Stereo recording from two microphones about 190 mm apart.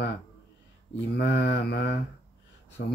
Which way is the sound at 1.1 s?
60° left (ahead or behind).